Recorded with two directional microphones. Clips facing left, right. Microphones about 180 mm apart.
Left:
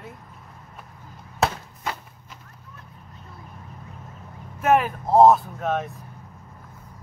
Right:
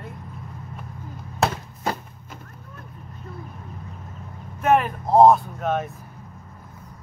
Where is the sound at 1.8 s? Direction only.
45° right (ahead or behind).